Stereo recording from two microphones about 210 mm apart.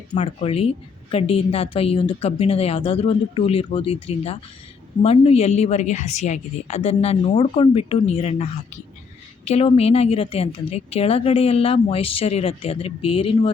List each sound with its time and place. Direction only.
0.2 s a woman's voice: 30° left (ahead or behind)